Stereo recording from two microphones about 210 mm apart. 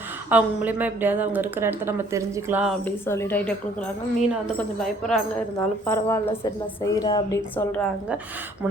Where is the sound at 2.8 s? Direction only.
10° left (ahead or behind).